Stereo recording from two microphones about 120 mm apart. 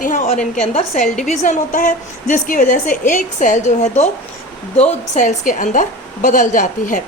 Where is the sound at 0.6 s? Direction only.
65° left (ahead or behind).